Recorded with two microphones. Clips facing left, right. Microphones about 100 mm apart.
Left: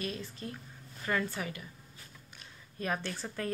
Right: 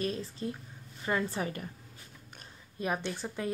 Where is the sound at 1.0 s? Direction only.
25° right (ahead or behind).